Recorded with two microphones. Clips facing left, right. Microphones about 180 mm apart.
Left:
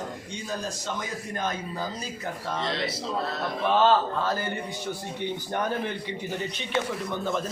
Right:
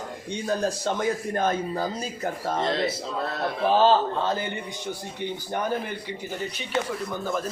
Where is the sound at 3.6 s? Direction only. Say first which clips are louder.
Right 2 dB; 35° right (ahead or behind).